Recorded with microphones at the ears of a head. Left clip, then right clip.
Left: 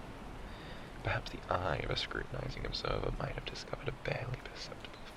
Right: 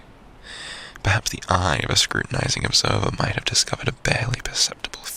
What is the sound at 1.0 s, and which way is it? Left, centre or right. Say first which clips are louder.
Speech: right 15 dB; right.